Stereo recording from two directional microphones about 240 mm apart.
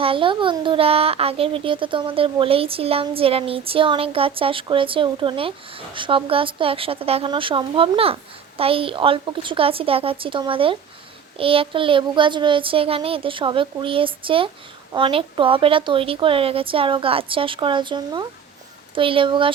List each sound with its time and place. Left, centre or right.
0.0 s a child's voice: right